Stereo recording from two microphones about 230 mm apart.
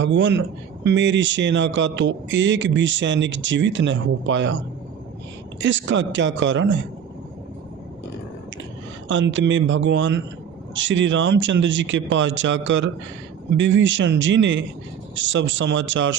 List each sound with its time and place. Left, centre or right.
0.0 s speech: right
9.0 s speech: right